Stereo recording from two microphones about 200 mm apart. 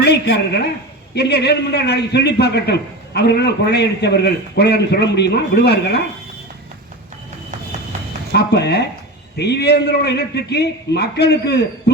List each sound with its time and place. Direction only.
0.0 s a woman's voice: 55° left (ahead or behind)
8.3 s a man's voice: 55° left (ahead or behind)